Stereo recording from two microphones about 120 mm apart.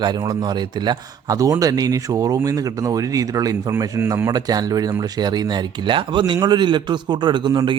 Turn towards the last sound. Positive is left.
turn(degrees=-40)  # may be behind; listen again after turning